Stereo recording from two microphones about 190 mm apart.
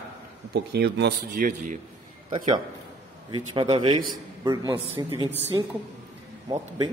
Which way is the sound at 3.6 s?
25° right (ahead or behind).